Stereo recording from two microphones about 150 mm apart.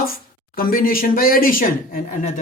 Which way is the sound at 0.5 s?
70° left (ahead or behind).